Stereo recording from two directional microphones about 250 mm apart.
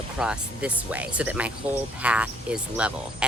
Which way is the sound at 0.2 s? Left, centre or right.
Centre.